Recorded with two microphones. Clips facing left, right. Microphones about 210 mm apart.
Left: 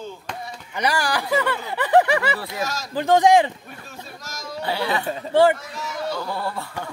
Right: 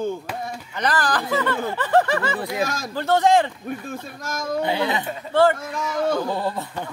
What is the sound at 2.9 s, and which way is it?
Speech, 15° left (ahead or behind).